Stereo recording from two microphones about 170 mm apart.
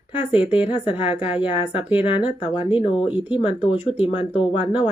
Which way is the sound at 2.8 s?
30° left (ahead or behind).